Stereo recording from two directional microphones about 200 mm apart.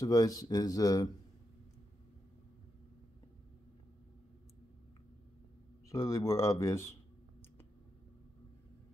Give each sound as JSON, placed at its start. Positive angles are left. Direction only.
{"t": 0.0, "sound": "speech", "side_deg": 15}
{"t": 5.9, "sound": "speech", "side_deg": 15}